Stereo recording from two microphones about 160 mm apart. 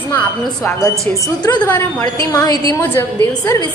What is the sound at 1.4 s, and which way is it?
Speech, 25° left (ahead or behind).